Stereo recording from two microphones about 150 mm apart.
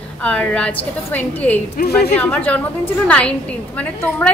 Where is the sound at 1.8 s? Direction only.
90° left.